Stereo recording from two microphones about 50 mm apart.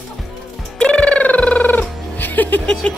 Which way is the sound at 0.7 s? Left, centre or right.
Centre.